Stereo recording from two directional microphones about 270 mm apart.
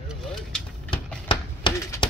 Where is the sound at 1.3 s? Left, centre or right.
Centre.